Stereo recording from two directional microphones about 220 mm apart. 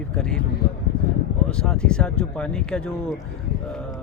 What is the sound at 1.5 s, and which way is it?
Speech, 5° left (ahead or behind).